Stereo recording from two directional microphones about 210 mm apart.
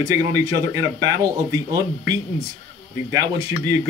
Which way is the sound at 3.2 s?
15° right (ahead or behind).